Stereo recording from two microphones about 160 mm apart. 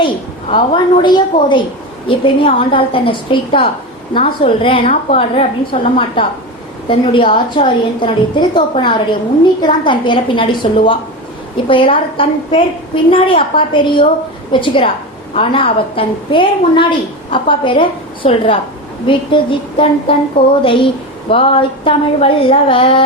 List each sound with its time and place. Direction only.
0.5 s a woman's voice: 30° left (ahead or behind)